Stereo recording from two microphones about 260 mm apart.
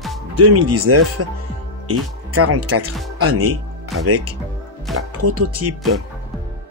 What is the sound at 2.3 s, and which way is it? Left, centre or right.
Speech, right.